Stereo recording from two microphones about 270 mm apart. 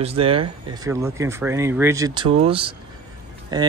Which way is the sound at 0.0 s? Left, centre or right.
Right.